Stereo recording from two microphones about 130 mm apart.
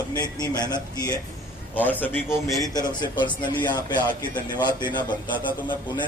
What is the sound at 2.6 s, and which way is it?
Speech, 30° left (ahead or behind).